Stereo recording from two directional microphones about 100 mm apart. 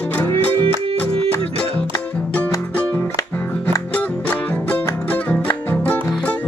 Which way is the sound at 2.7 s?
15° left (ahead or behind).